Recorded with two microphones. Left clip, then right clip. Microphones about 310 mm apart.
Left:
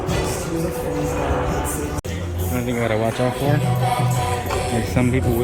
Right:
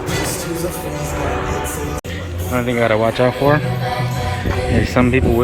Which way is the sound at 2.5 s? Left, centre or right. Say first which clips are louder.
Right 6 dB; centre.